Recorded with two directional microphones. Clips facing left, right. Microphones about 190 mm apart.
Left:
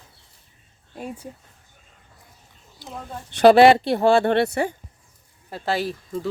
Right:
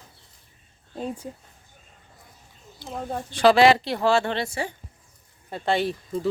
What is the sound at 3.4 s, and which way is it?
Speech, 55° left (ahead or behind).